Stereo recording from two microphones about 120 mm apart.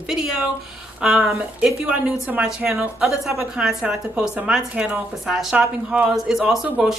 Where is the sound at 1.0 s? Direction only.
5° right (ahead or behind).